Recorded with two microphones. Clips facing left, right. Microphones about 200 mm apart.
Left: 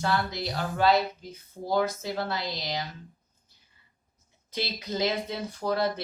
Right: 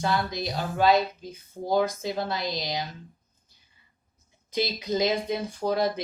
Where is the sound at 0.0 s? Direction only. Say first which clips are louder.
Right 1 dB; 15° right (ahead or behind).